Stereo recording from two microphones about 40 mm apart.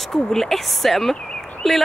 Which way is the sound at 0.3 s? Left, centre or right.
Centre.